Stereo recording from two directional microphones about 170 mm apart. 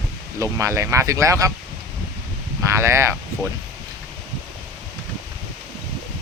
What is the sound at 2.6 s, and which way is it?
Speech, 15° right (ahead or behind).